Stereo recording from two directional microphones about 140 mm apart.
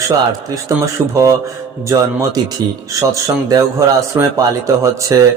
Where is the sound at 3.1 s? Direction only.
25° right (ahead or behind).